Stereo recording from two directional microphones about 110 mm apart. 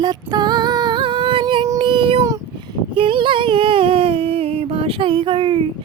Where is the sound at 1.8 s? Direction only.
55° right (ahead or behind).